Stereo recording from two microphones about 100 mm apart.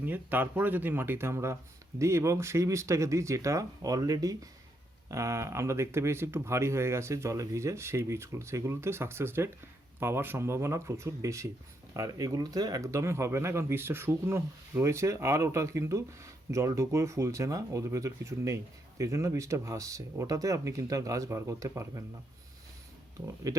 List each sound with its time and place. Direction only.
0.0 s speech: 20° right (ahead or behind)
23.2 s speech: 35° right (ahead or behind)